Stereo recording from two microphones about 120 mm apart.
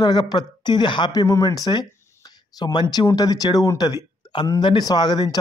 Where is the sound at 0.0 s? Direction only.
35° left (ahead or behind).